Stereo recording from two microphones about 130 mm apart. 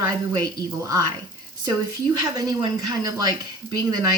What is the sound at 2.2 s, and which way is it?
Speech, 30° right (ahead or behind).